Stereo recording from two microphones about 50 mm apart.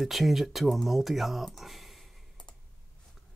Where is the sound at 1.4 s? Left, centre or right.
Centre.